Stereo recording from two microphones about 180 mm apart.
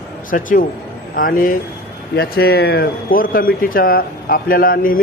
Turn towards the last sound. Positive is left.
turn(degrees=50)  # may be behind; listen again after turning